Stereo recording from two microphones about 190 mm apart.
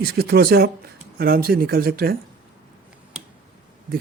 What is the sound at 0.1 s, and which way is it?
Speech, 55° right (ahead or behind).